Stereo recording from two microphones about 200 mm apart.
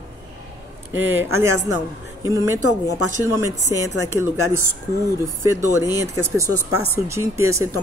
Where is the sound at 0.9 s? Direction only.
10° right (ahead or behind).